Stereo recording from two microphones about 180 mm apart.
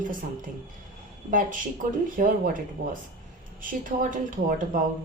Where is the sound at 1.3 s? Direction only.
45° right (ahead or behind).